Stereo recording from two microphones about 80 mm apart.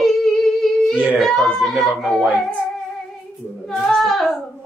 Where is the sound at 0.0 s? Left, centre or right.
Centre.